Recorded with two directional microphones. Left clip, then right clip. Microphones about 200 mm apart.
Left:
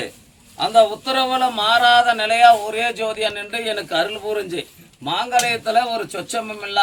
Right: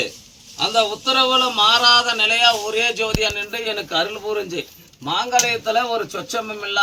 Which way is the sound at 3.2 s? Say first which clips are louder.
Right 1 dB; centre (ahead or behind).